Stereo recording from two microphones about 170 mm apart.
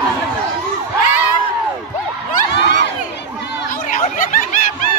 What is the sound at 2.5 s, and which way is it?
Crowd, 85° left.